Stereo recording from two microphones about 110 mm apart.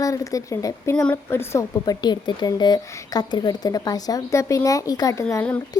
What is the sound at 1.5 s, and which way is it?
Speech, 25° left (ahead or behind).